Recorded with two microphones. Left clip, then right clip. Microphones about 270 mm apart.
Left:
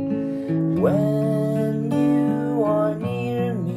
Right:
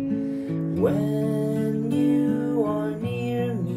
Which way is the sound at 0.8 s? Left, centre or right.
Centre.